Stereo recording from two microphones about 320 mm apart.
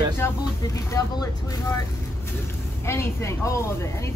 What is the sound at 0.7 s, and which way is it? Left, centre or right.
Speech, centre.